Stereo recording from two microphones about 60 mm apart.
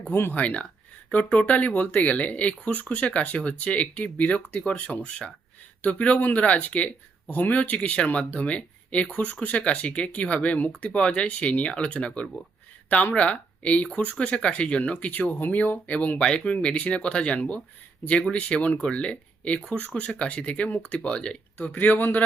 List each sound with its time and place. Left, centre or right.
0.1 s speech: left
0.3 s speech: left